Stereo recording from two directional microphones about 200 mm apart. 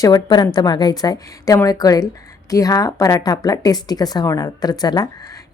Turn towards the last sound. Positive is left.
turn(degrees=20)  # may be behind; listen again after turning